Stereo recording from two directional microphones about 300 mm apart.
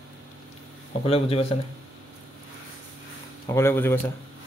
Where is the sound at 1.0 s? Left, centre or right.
Centre.